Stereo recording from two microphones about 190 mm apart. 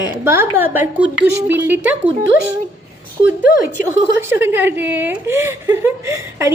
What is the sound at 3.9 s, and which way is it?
Speech, 10° right (ahead or behind).